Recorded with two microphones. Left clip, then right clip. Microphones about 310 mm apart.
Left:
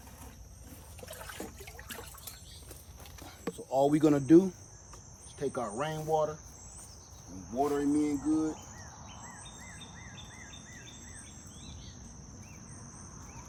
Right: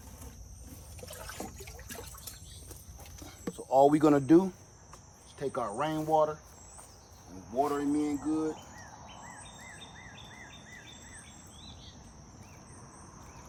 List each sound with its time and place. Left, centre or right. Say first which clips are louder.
3.7 s speech: right 3 dB; centre
7.5 s speech: even; centre